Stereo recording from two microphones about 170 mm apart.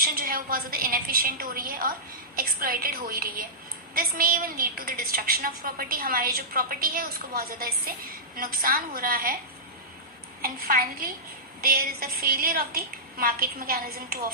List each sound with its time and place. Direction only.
0.0 s a woman's voice: 60° right (ahead or behind)
10.4 s a woman's voice: 60° right (ahead or behind)